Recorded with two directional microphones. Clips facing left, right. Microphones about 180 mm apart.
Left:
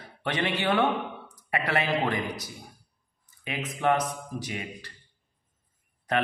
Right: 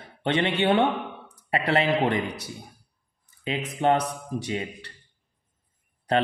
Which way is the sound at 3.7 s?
30° right (ahead or behind).